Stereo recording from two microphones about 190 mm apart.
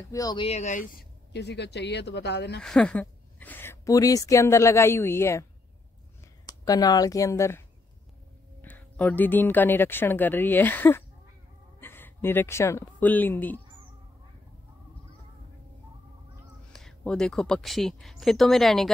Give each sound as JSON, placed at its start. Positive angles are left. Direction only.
{"t": 0.1, "sound": "speech", "side_deg": 20}
{"t": 0.5, "sound": "speech", "side_deg": 40}
{"t": 1.3, "sound": "speech", "side_deg": 65}
{"t": 2.6, "sound": "a woman's voice", "side_deg": 5}
{"t": 6.4, "sound": "speech", "side_deg": 20}
{"t": 16.7, "sound": "speech", "side_deg": 5}